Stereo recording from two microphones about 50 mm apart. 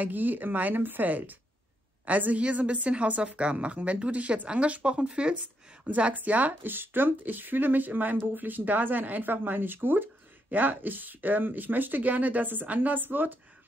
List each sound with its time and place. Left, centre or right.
0.0 s a woman's voice: right